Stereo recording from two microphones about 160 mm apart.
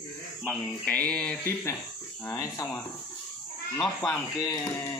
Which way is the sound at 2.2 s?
20° left (ahead or behind).